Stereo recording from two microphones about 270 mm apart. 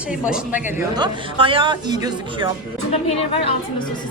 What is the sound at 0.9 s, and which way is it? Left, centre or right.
Speech, centre.